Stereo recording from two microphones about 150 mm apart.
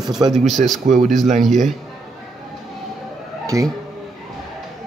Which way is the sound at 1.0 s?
Centre (ahead or behind).